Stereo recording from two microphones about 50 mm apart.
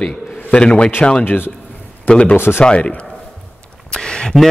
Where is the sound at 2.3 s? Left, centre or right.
Left.